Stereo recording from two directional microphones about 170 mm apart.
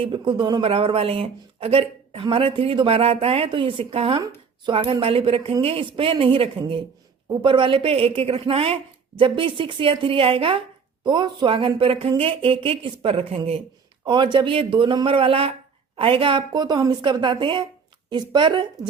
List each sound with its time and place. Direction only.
0.0 s a woman's voice: 30° right (ahead or behind)